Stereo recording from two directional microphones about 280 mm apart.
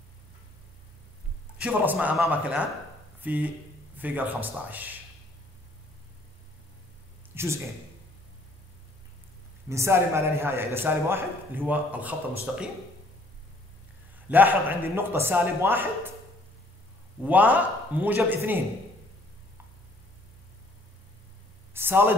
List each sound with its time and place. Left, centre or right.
1.6 s a man's voice: centre
7.3 s a man's voice: centre
9.7 s a man's voice: centre
14.3 s a man's voice: centre
17.2 s a man's voice: centre
21.7 s a sound: centre